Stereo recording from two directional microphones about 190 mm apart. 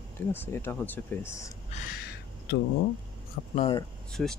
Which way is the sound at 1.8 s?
55° left (ahead or behind).